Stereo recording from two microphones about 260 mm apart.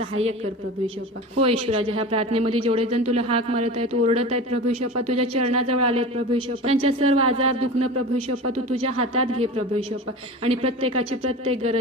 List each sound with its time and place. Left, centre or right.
1.4 s speech: right
4.9 s a man's voice: right
6.6 s speech: right
8.7 s speech: right